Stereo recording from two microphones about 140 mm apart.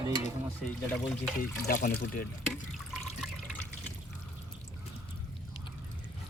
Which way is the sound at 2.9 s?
Centre (ahead or behind).